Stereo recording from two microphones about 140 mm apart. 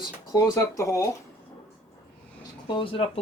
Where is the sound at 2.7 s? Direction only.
40° left (ahead or behind).